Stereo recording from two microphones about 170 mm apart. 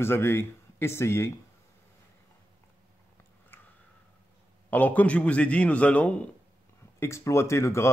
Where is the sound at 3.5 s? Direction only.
10° left (ahead or behind).